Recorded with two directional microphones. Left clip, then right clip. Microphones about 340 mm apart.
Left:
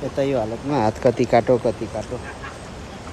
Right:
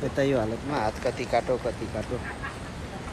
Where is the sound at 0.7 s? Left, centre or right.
Left.